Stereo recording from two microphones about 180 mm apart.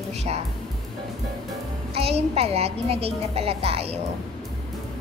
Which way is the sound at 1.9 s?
35° right (ahead or behind).